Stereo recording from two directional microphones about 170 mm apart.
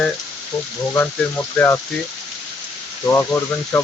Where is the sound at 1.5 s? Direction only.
15° left (ahead or behind).